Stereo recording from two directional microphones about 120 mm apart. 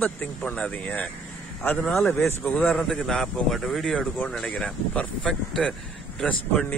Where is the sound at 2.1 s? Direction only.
15° left (ahead or behind).